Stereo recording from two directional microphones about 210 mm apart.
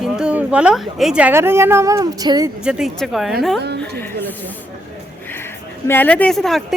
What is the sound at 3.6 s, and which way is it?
Speech, 50° right (ahead or behind).